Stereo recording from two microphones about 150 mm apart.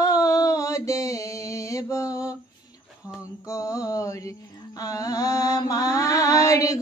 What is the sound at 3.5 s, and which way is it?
Mantra, 20° left (ahead or behind).